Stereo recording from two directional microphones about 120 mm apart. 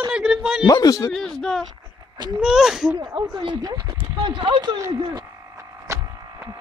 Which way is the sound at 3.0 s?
40° right (ahead or behind).